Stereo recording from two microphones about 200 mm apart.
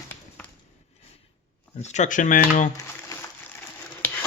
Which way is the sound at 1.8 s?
35° left (ahead or behind).